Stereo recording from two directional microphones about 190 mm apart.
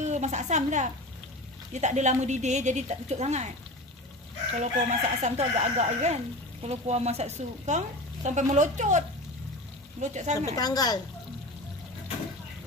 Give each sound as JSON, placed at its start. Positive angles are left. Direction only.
{"t": 0.0, "sound": "a woman's voice", "side_deg": -40}
{"t": 4.6, "sound": "speech", "side_deg": -35}
{"t": 10.3, "sound": "a woman's voice", "side_deg": 20}